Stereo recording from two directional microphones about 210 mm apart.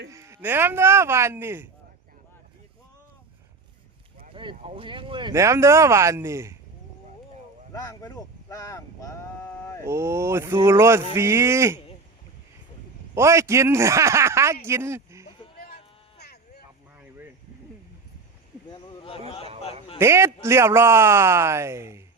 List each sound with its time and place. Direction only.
0.1 s speech: 15° right (ahead or behind)
4.4 s speech: 25° right (ahead or behind)
7.7 s speech: 15° left (ahead or behind)
9.8 s speech: 15° right (ahead or behind)
13.1 s a man's voice: 15° right (ahead or behind)
16.1 s a sound: 50° left (ahead or behind)
18.7 s a sound: 25° left (ahead or behind)
20.0 s speech: 10° right (ahead or behind)